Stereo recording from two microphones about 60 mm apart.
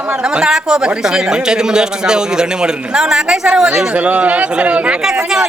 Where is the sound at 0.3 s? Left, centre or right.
Centre.